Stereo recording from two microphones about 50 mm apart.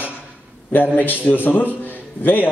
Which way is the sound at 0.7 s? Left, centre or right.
Left.